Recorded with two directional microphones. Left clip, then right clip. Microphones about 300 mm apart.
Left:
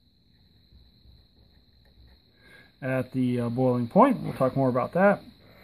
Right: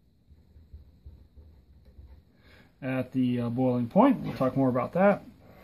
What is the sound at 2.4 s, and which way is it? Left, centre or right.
Speech, centre.